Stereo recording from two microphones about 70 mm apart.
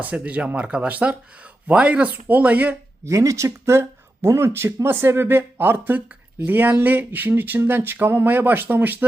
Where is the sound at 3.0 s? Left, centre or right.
Right.